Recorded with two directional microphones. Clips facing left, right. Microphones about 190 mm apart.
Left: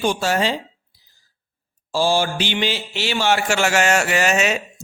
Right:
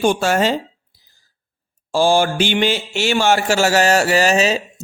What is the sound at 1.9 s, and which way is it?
Speech, 55° right (ahead or behind).